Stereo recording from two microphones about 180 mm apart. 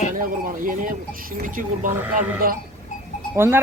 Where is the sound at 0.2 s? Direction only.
50° right (ahead or behind).